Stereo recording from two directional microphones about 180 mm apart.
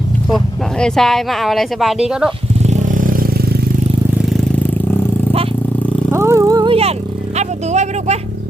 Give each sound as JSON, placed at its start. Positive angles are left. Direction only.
{"t": 0.3, "sound": "speech", "side_deg": 0}
{"t": 2.6, "sound": "vehicle", "side_deg": -45}
{"t": 6.1, "sound": "a sound", "side_deg": -15}
{"t": 7.3, "sound": "vehicle", "side_deg": -40}